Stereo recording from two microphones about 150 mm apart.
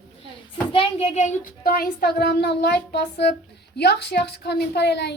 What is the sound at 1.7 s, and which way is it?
A woman's voice, 85° left.